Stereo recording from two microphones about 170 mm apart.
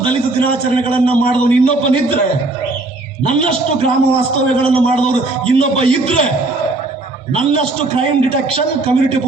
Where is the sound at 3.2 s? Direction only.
30° right (ahead or behind).